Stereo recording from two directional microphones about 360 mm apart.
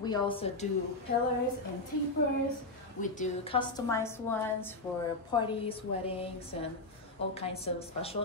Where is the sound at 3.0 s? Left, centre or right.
Left.